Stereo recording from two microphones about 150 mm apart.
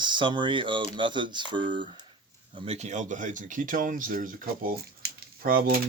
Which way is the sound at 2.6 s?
45° right (ahead or behind).